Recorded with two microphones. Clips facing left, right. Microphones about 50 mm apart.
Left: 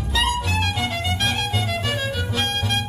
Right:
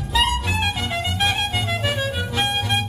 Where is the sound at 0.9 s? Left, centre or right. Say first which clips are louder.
Right 2 dB; centre.